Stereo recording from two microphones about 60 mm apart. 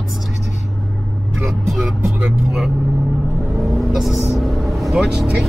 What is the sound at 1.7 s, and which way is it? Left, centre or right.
Speech, centre.